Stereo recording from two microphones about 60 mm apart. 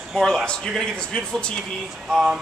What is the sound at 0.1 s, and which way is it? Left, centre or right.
A man's voice, centre.